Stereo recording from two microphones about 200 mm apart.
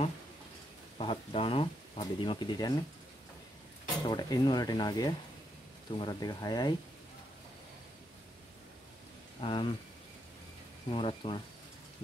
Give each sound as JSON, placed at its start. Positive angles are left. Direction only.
{"t": 0.9, "sound": "speech", "side_deg": 25}
{"t": 4.0, "sound": "speech", "side_deg": 20}
{"t": 9.4, "sound": "speech", "side_deg": 25}
{"t": 10.9, "sound": "speech", "side_deg": 25}